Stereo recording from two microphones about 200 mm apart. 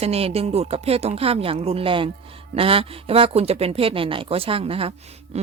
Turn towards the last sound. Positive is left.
turn(degrees=-35)  # may be behind; listen again after turning